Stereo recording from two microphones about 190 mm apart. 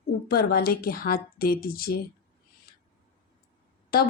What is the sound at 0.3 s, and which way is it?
Speech, 55° left (ahead or behind).